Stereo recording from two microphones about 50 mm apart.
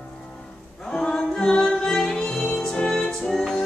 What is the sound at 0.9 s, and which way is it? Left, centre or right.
Music, centre.